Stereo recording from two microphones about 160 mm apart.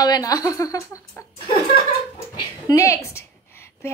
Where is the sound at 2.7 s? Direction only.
20° left (ahead or behind).